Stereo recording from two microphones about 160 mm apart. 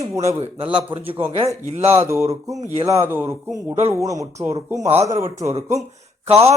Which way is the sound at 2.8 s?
15° right (ahead or behind).